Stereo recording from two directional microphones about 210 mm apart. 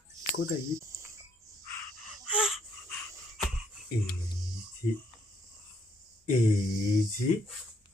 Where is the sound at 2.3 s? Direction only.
Centre (ahead or behind).